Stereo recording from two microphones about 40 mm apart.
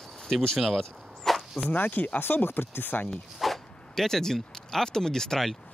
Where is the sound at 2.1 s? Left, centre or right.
Left.